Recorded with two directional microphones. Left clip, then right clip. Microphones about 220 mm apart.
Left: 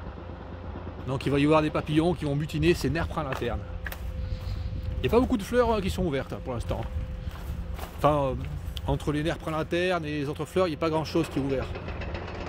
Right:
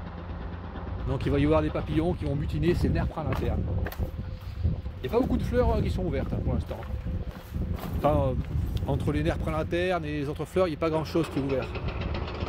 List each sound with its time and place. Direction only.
1.0 s speech: 15° left (ahead or behind); by 3.5 s 35° left (ahead or behind)
5.0 s speech: 40° left (ahead or behind)
8.0 s speech: 25° left (ahead or behind)
11.7 s vehicle: 40° right (ahead or behind)